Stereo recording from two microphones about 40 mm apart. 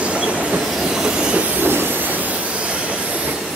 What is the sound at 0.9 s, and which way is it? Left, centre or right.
Train, centre.